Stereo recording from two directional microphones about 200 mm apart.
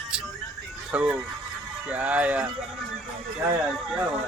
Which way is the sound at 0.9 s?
5° right (ahead or behind).